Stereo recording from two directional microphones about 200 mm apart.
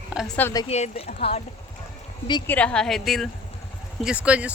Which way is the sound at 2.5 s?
5° left (ahead or behind).